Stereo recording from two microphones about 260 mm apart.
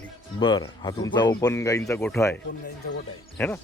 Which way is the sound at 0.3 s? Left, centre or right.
Centre.